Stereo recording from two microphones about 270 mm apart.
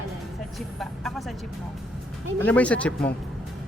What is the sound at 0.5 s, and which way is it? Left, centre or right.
Speech, centre.